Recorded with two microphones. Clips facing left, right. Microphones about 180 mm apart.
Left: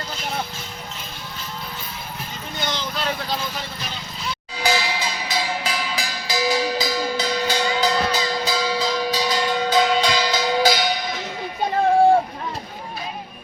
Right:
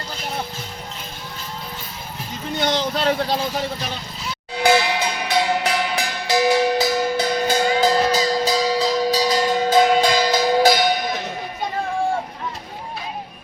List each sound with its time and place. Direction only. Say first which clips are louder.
2.6 s vehicle: right 7 dB; 75° right (ahead or behind)
2.9 s speech: right 6 dB; 30° right (ahead or behind)
4.5 s music: right 6 dB; 60° right (ahead or behind)